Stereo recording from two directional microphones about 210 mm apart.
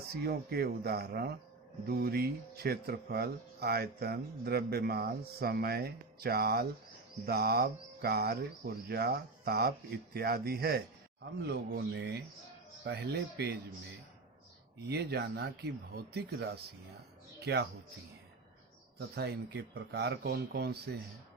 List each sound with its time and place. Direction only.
0.1 s speech: 50° right (ahead or behind)
14.8 s speech: 50° right (ahead or behind)
18.9 s speech: 50° right (ahead or behind)